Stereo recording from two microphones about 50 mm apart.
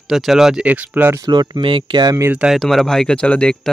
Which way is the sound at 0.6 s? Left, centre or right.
Right.